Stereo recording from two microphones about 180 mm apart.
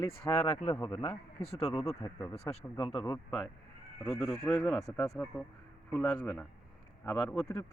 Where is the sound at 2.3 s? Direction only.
35° left (ahead or behind).